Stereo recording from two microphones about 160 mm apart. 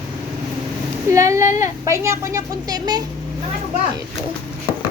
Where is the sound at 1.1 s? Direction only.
20° right (ahead or behind).